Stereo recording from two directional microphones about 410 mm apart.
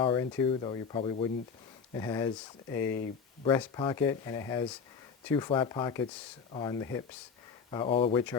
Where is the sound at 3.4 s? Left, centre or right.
Centre.